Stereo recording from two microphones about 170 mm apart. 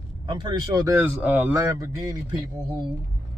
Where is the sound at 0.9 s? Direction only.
10° right (ahead or behind).